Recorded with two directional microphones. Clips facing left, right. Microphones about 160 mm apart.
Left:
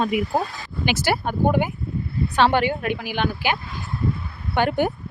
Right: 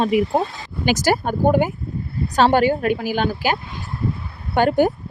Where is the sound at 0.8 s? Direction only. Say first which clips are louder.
Right 4 dB; 40° right (ahead or behind).